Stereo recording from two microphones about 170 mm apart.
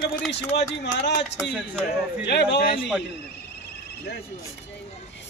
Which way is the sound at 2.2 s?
90° left.